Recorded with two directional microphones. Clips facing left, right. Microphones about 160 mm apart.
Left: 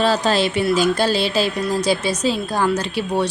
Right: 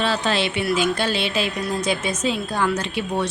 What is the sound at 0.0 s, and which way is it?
A woman's voice, 40° left (ahead or behind).